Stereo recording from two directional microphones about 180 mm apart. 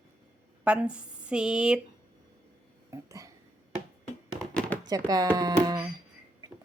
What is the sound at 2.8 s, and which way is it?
Cough, 15° right (ahead or behind).